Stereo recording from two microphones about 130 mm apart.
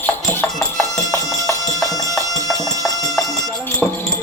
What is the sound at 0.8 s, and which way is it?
Music, 25° left (ahead or behind).